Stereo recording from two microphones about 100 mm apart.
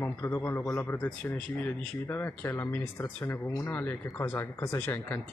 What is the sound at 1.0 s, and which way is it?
Speech, 15° left (ahead or behind).